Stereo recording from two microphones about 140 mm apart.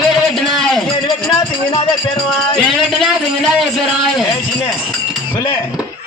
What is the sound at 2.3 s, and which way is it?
A man's voice, centre (ahead or behind).